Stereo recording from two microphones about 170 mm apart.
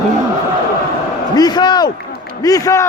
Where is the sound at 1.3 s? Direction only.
25° left (ahead or behind).